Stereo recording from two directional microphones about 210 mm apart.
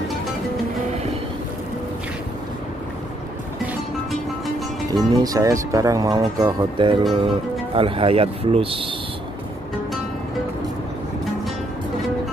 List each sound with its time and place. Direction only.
4.9 s speech: 15° right (ahead or behind)